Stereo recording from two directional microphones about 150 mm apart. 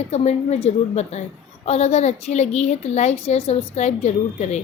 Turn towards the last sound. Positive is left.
turn(degrees=50)  # may be behind; listen again after turning